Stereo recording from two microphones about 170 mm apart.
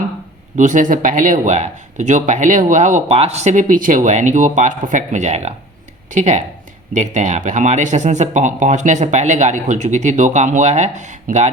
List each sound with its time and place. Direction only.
0.5 s speech: 50° right (ahead or behind)